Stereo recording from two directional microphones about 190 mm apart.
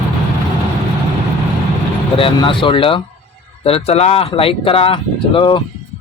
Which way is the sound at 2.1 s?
30° left (ahead or behind).